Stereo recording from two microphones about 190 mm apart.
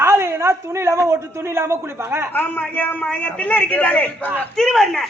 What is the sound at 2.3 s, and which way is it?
A woman's voice, 10° left (ahead or behind).